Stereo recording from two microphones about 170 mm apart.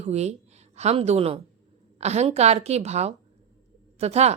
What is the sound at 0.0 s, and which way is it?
Speech, 40° right (ahead or behind).